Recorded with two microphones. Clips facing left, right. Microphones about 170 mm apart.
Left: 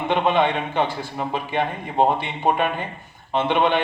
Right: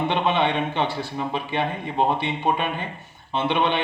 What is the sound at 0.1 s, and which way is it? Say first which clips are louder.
Speech: left 7 dB; 45° left (ahead or behind).